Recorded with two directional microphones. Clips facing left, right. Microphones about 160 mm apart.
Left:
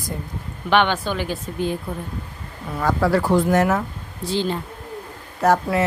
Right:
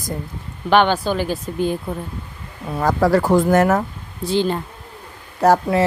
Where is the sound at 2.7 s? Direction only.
40° right (ahead or behind); by 4.5 s 55° right (ahead or behind).